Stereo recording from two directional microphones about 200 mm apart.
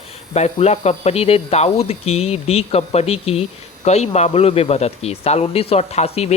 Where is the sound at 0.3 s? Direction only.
30° left (ahead or behind).